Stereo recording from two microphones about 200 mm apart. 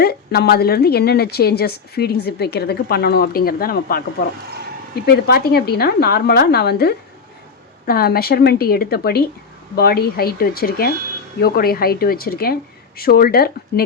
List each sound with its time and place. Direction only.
0.0 s a woman's voice: 50° left (ahead or behind)
5.0 s a woman's voice: 50° left (ahead or behind)